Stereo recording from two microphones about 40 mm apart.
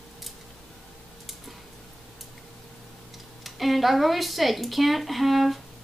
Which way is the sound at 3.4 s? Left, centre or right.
Centre.